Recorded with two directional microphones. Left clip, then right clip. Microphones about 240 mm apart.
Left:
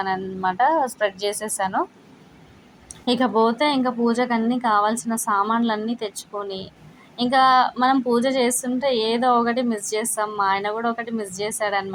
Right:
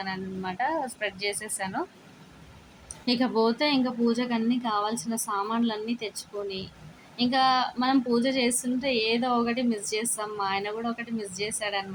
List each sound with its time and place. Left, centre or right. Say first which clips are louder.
0.0 s a woman's voice: left 10 dB; centre
3.1 s a woman's voice: left 6 dB; centre